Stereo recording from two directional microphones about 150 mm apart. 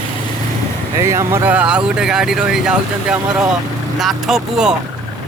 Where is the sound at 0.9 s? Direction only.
20° right (ahead or behind).